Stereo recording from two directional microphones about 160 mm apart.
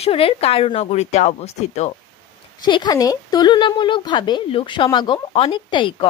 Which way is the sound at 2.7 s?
25° left (ahead or behind).